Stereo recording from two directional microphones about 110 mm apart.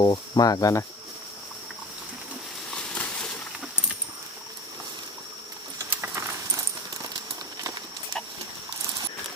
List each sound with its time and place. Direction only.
0.0 s speech: 40° left (ahead or behind)
2.6 s a sound: 10° left (ahead or behind)
5.8 s keys jangling: 20° right (ahead or behind)